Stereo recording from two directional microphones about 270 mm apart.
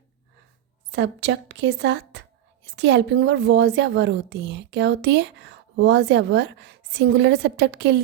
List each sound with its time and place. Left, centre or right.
0.9 s a woman's voice: right